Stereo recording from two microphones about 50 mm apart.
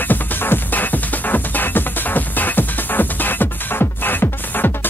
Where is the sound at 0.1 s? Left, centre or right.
Left.